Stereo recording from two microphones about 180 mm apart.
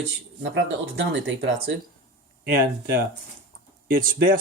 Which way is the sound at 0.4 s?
90° right.